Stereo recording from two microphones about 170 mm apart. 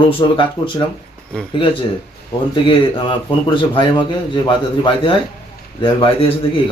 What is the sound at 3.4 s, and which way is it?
A man's voice, 30° left (ahead or behind).